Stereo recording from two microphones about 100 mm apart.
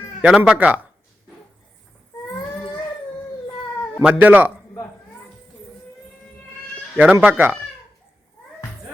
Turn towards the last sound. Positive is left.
turn(degrees=-20)  # may be behind; listen again after turning